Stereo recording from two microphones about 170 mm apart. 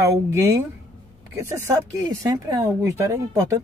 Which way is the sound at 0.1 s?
20° right (ahead or behind).